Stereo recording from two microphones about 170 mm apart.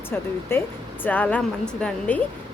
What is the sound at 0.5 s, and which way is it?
Speech, 15° left (ahead or behind).